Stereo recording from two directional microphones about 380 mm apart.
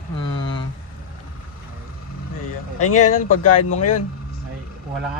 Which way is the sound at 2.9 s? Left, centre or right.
Centre.